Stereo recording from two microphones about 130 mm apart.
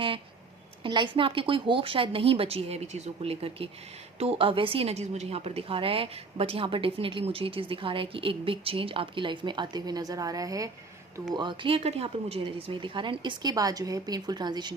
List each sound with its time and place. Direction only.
0.8 s a woman's voice: 35° right (ahead or behind)
11.3 s a woman's voice: 40° right (ahead or behind)